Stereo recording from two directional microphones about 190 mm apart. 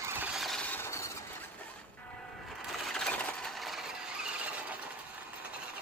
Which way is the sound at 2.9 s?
5° left (ahead or behind).